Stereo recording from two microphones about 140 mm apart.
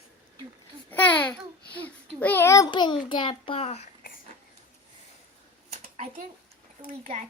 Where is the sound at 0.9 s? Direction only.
10° left (ahead or behind).